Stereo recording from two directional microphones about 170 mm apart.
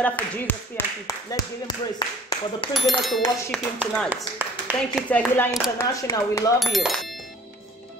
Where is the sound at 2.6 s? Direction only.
30° left (ahead or behind).